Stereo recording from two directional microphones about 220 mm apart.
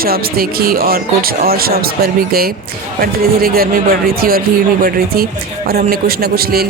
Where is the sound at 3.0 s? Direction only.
40° right (ahead or behind).